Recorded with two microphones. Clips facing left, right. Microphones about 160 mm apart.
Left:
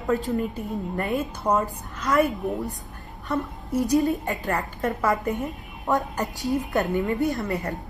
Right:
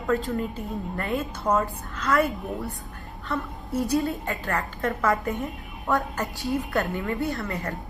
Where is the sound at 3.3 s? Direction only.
20° left (ahead or behind).